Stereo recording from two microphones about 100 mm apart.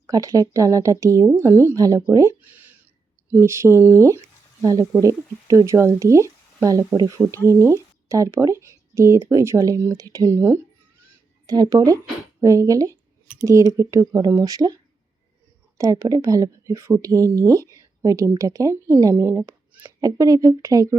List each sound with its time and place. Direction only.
0.1 s speech: 35° right (ahead or behind)
2.4 s a sound: 20° right (ahead or behind)
3.2 s speech: 25° right (ahead or behind)
11.4 s speech: 40° right (ahead or behind)
15.8 s speech: 35° right (ahead or behind)
20.0 s speech: 35° right (ahead or behind)